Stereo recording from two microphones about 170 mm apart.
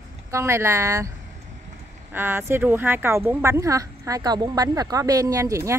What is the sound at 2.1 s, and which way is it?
Speech, 15° right (ahead or behind).